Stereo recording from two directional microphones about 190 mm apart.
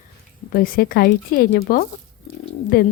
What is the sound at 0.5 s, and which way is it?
Speech, 50° left (ahead or behind).